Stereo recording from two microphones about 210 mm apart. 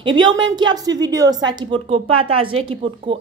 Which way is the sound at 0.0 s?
20° right (ahead or behind).